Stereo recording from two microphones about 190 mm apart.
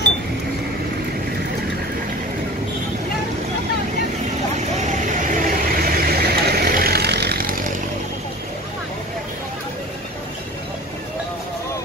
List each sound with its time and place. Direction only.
4.6 s vehicle: 40° right (ahead or behind)